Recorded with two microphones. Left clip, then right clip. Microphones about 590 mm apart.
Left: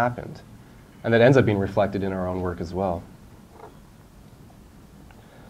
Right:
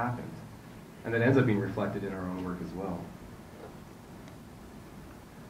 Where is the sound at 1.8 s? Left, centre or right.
Left.